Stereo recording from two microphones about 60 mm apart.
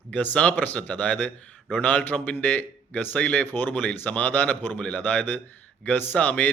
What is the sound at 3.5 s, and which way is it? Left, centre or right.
Speech, left.